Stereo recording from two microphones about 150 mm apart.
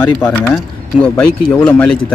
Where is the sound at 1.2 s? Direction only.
5° left (ahead or behind).